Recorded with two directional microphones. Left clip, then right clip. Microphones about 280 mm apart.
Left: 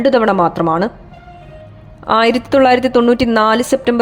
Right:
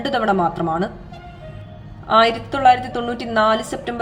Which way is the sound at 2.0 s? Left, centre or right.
Left.